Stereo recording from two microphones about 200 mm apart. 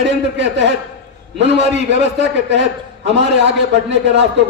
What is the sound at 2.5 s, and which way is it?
A man's voice, 60° right (ahead or behind).